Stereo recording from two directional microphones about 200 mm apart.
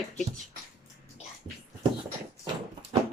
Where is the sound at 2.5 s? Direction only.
20° right (ahead or behind).